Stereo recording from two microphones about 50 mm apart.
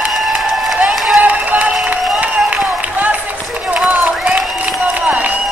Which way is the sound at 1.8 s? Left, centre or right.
Right.